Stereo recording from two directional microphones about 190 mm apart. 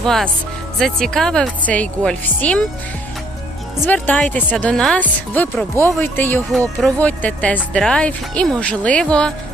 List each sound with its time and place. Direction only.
0.0 s speech: centre (ahead or behind)
3.8 s speech: 10° left (ahead or behind)